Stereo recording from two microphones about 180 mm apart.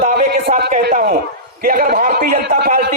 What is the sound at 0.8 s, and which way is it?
A man's voice, 55° right (ahead or behind).